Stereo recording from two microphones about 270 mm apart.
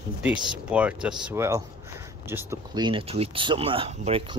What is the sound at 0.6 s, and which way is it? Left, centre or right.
Speech, centre.